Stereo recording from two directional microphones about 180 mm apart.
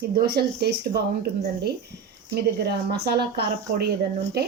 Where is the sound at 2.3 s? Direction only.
65° right (ahead or behind).